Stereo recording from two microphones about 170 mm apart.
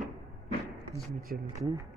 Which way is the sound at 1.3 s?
55° right (ahead or behind).